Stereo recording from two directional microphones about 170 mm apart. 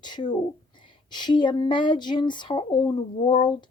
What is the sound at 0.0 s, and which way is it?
Speech, 25° left (ahead or behind).